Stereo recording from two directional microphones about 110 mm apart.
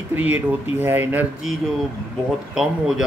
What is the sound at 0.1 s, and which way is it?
Speech, 15° right (ahead or behind).